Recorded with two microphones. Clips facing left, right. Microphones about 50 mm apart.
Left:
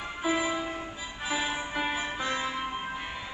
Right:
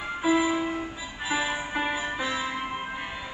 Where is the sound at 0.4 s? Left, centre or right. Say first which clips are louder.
Right 5 dB; centre.